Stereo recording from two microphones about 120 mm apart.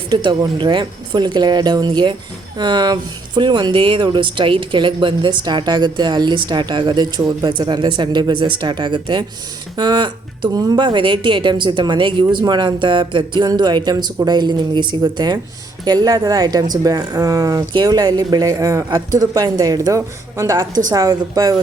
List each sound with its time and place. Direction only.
0.1 s speech: 40° right (ahead or behind)